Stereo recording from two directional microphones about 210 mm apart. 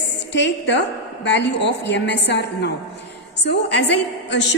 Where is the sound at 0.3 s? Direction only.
55° left (ahead or behind).